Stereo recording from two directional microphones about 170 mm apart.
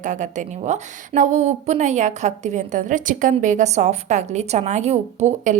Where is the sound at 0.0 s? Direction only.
45° right (ahead or behind).